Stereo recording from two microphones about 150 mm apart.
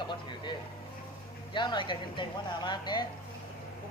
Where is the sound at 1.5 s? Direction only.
30° left (ahead or behind).